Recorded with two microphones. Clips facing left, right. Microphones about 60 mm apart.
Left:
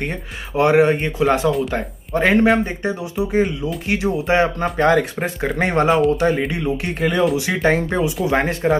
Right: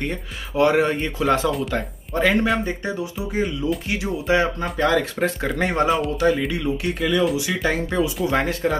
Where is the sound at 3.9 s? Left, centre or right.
Left.